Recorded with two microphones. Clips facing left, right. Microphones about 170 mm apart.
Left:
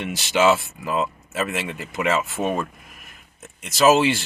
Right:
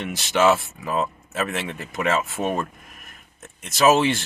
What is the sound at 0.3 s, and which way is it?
Speech, 5° left (ahead or behind).